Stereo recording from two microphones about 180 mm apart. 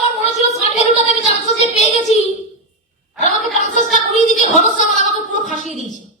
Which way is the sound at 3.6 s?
45° left (ahead or behind).